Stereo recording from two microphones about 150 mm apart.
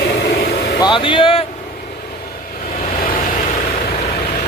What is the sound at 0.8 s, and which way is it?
Speech, 35° left (ahead or behind).